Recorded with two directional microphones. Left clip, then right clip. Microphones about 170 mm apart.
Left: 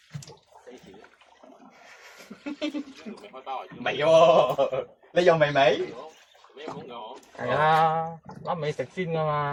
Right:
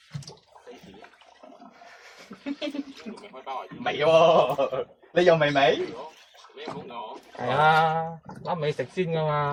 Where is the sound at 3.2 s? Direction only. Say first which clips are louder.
Even; 30° left (ahead or behind).